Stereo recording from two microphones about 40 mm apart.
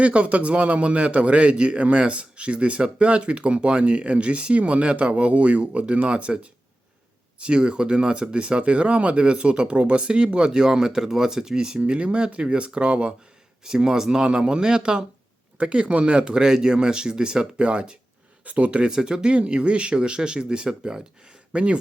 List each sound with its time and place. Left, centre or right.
0.0 s a man's voice: right
13.7 s a man's voice: centre; by 18.9 s right
18.9 s a man's voice: centre